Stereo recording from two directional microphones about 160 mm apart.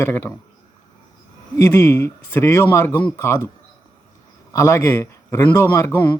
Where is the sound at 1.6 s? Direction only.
15° left (ahead or behind).